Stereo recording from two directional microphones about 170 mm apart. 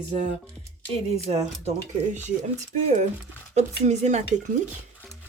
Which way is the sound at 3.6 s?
40° right (ahead or behind).